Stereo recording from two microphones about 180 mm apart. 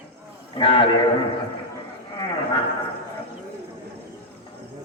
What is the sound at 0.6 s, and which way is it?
Speech, 30° left (ahead or behind).